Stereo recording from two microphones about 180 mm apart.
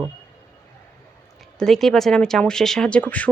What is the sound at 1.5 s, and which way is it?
Speech, centre (ahead or behind).